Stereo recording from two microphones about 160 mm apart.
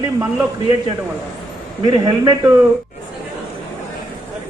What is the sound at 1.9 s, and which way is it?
Speech, 25° right (ahead or behind).